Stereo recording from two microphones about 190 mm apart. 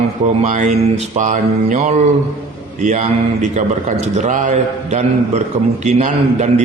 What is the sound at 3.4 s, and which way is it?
A man's voice, 40° right (ahead or behind).